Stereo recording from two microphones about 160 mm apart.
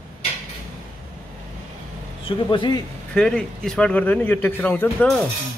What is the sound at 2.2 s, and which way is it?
Speech, 30° left (ahead or behind).